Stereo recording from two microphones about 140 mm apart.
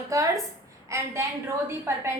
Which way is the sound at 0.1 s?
25° right (ahead or behind).